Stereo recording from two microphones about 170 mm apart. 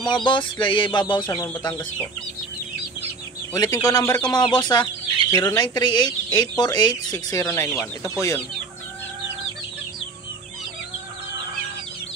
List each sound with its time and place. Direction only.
0.1 s speech: 30° left (ahead or behind)
3.5 s speech: 20° left (ahead or behind)
5.3 s speech: 15° left (ahead or behind)
5.6 s speech: 25° left (ahead or behind)